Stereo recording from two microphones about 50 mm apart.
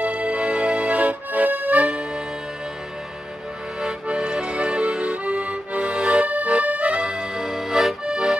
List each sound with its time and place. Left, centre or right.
0.0 s accordion: right
4.1 s accordion: centre
7.0 s accordion: centre
8.0 s accordion: centre